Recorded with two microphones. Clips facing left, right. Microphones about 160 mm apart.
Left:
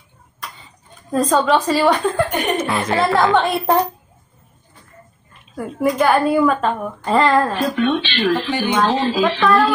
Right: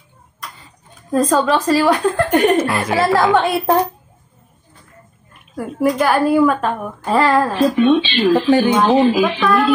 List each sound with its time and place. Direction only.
1.1 s a woman's voice: centre (ahead or behind)
5.3 s a woman's voice: 5° right (ahead or behind)
8.3 s speech: 20° right (ahead or behind)
9.4 s a woman's voice: centre (ahead or behind)